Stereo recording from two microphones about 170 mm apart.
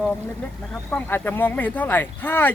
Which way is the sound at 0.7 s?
10° left (ahead or behind).